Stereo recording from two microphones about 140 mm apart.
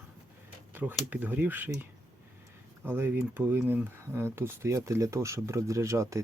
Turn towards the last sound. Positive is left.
turn(degrees=-20)  # may be behind; listen again after turning